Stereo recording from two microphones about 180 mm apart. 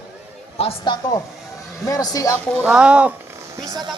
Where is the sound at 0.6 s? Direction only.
30° left (ahead or behind).